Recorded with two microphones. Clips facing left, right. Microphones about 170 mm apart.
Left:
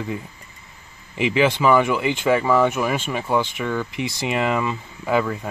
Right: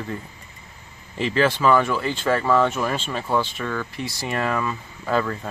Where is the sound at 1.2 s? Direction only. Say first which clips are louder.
Left 2 dB; 15° left (ahead or behind).